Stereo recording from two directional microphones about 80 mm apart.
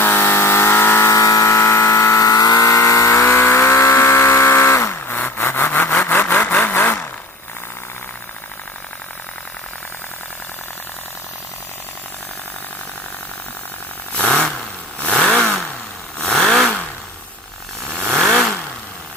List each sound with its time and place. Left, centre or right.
0.0 s a sound: left
1.1 s vehicle: left
14.2 s vehicle: centre
15.3 s vehicle: centre
17.8 s vehicle: centre